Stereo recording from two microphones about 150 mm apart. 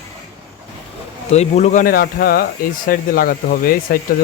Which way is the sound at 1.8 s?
85° left.